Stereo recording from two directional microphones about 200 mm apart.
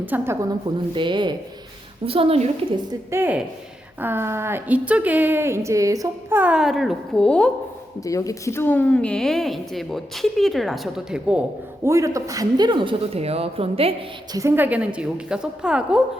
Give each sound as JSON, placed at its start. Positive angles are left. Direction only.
{"t": 0.0, "sound": "speech", "side_deg": -10}
{"t": 0.9, "sound": "a man's voice", "side_deg": -25}
{"t": 3.1, "sound": "speech", "side_deg": -10}
{"t": 8.0, "sound": "speech", "side_deg": 15}
{"t": 11.9, "sound": "a man's voice", "side_deg": -15}
{"t": 14.3, "sound": "speech", "side_deg": -10}